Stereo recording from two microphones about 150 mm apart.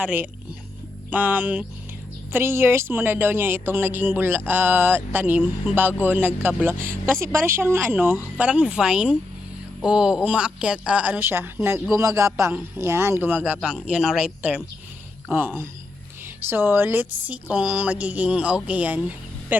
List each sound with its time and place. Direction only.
0.0 s speech: 10° right (ahead or behind)